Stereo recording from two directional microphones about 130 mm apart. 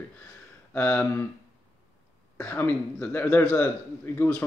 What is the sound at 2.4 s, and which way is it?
Speech, 15° left (ahead or behind).